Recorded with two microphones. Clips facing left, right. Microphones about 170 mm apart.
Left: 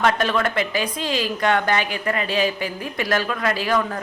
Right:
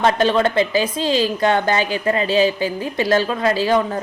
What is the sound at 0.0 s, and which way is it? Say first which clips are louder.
A woman's voice: right 4 dB; 30° right (ahead or behind).